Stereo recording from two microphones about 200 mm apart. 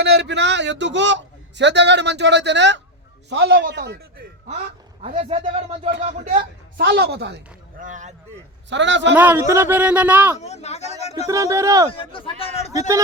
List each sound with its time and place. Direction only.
0.0 s a man's voice: 55° right (ahead or behind)
5.0 s speech: 40° right (ahead or behind)
5.3 s speech: 30° right (ahead or behind); by 7.3 s 55° right (ahead or behind)
7.8 s speech: 40° right (ahead or behind)
8.7 s a man's voice: 65° right (ahead or behind)
9.1 s speech: 10° right (ahead or behind)
10.4 s speech: 35° left (ahead or behind)
11.3 s speech: 15° right (ahead or behind)
11.9 s a man's voice: 25° left (ahead or behind)